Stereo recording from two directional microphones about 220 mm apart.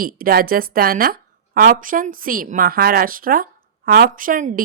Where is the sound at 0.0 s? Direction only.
40° right (ahead or behind).